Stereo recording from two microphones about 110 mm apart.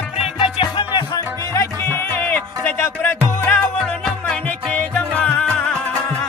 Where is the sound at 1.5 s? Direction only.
20° left (ahead or behind).